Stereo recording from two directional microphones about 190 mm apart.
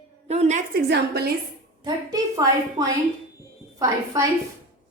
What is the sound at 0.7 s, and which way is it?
Speech, 60° right (ahead or behind).